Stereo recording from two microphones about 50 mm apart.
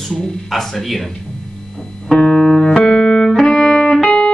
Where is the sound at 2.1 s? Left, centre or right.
Centre.